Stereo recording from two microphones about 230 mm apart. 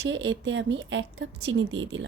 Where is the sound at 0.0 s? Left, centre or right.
Right.